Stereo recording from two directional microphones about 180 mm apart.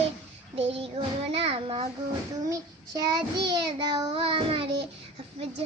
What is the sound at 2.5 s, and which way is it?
Child singing, 20° right (ahead or behind).